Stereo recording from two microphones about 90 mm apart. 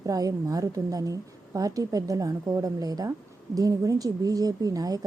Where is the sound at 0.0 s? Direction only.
40° right (ahead or behind).